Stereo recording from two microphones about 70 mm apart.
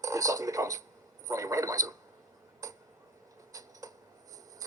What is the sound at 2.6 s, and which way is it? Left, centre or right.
Tick-tock, right.